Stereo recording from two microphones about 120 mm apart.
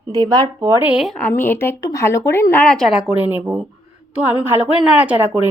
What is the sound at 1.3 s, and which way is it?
Speech, 15° left (ahead or behind).